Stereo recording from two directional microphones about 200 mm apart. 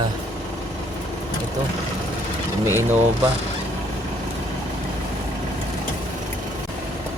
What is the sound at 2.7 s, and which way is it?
Speech, 10° right (ahead or behind).